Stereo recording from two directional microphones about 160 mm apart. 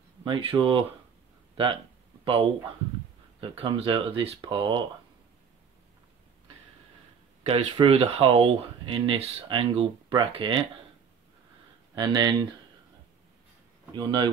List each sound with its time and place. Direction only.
0.2 s speech: 35° right (ahead or behind)
2.2 s speech: 35° right (ahead or behind)
7.4 s speech: 35° right (ahead or behind)
11.9 s speech: 25° right (ahead or behind)
13.9 s speech: 25° right (ahead or behind)